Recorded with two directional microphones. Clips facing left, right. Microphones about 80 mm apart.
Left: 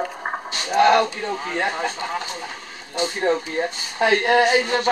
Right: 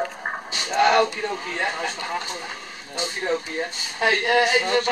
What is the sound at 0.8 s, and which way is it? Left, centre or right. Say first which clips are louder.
Speech: left 2 dB; centre.